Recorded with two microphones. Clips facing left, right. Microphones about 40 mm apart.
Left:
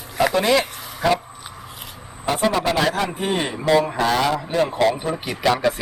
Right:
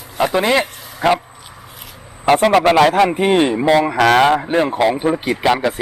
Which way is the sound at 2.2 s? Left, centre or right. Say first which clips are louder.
Right 8 dB; right.